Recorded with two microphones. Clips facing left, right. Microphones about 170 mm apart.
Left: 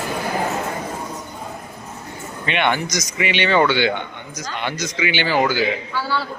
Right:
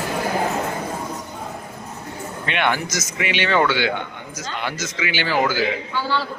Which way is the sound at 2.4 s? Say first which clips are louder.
Left 2 dB; centre (ahead or behind).